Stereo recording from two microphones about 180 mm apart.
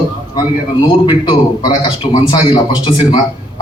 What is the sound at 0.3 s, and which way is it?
A man's voice, 25° left (ahead or behind).